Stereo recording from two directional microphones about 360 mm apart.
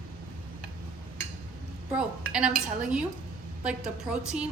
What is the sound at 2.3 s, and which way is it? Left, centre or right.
A woman's voice, centre.